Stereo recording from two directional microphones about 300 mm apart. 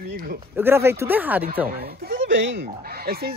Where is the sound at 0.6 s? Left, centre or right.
Centre.